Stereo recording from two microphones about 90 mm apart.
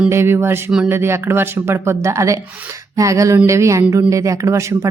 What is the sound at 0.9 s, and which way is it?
Speech, 25° right (ahead or behind).